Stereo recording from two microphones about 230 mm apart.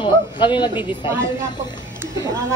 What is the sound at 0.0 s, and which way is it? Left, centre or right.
Speech, centre.